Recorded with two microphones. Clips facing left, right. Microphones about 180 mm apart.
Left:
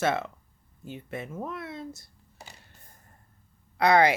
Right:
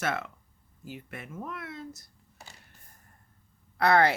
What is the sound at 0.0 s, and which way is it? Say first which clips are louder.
Speech: left 5 dB; 25° left (ahead or behind).